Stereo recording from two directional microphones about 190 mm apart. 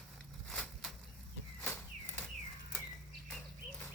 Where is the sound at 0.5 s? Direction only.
5° left (ahead or behind).